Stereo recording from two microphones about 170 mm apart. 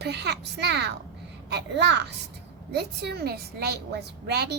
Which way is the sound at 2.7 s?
75° right (ahead or behind).